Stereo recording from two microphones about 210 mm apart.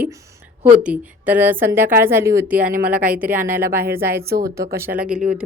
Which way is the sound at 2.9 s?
5° right (ahead or behind).